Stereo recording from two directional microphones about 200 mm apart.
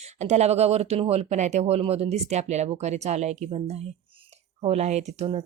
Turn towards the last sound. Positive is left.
turn(degrees=-35)  # may be behind; listen again after turning